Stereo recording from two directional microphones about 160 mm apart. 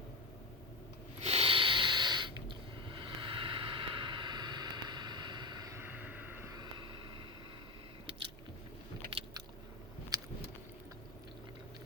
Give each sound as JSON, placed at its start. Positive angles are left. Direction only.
{"t": 1.2, "sound": "snort", "side_deg": -40}
{"t": 2.8, "sound": "vehicle", "side_deg": -30}
{"t": 6.5, "sound": "vehicle", "side_deg": -30}